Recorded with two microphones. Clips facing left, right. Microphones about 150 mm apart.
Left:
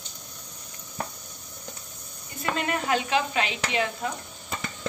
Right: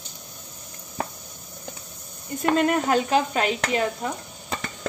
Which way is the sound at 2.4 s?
50° right (ahead or behind).